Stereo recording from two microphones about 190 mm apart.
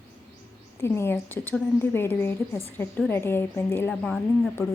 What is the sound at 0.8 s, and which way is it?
A woman's voice, 15° left (ahead or behind).